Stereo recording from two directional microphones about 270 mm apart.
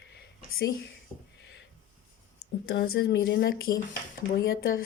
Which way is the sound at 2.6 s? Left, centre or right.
Left.